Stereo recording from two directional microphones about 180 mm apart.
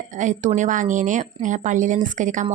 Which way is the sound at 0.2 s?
45° right (ahead or behind).